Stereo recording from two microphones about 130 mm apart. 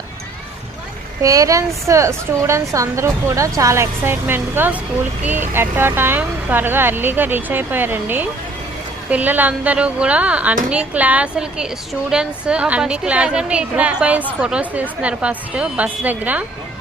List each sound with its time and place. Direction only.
1.2 s a woman's voice: 25° right (ahead or behind)